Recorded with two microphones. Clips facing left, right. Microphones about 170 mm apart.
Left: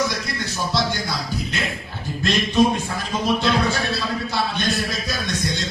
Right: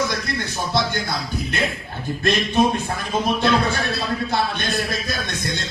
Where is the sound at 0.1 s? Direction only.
55° right (ahead or behind).